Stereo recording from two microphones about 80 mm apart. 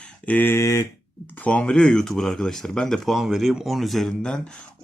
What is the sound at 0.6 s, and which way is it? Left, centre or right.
Speech, left.